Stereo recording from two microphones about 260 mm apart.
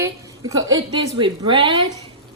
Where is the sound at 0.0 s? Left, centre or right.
Centre.